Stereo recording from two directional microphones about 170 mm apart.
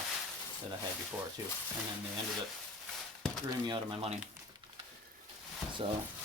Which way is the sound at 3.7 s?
30° right (ahead or behind).